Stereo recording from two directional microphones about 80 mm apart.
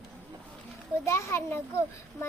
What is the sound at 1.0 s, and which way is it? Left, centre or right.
Speech, left.